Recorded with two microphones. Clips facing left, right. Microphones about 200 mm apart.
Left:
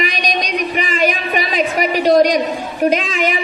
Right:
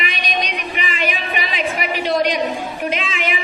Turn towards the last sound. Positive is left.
turn(degrees=40)  # may be behind; listen again after turning